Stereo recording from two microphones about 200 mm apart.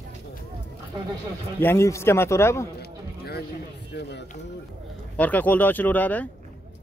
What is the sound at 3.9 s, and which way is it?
Speech, 55° left (ahead or behind).